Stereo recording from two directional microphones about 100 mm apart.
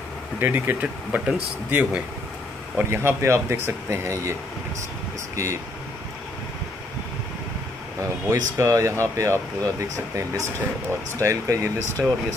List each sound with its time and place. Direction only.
0.4 s speech: 20° right (ahead or behind)
8.3 s speech: 30° right (ahead or behind)
12.0 s speech: 5° right (ahead or behind)